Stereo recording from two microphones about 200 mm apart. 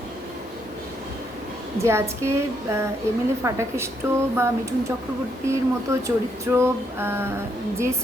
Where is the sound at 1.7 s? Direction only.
15° right (ahead or behind).